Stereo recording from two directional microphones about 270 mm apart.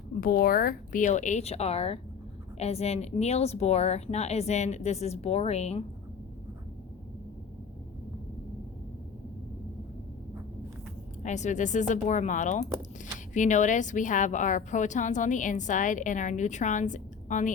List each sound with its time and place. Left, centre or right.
0.2 s a woman's voice: left
11.2 s a woman's voice: left